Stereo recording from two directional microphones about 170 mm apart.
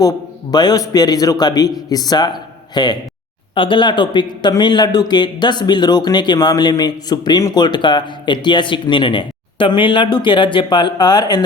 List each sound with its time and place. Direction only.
0.5 s a man's voice: 25° left (ahead or behind)